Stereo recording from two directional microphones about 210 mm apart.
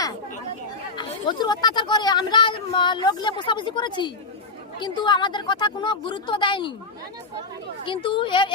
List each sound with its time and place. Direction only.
0.9 s speech: 20° left (ahead or behind)
7.9 s speech: 25° left (ahead or behind)